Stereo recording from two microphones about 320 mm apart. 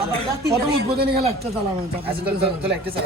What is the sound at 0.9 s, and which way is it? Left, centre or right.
Speech, right.